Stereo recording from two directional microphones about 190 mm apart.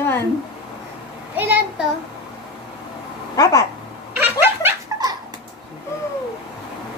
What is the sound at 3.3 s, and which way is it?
Speech, 20° left (ahead or behind).